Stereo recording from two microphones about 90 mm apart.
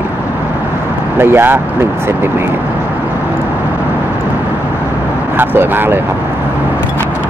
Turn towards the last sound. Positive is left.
turn(degrees=-25)  # may be behind; listen again after turning